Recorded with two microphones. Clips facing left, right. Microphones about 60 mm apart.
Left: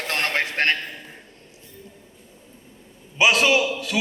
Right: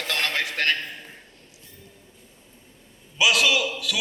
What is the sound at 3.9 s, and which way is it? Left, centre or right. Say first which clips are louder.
Music: left 4 dB; left.